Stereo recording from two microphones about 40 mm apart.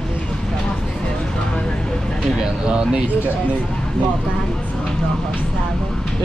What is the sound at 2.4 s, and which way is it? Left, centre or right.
Speech, right.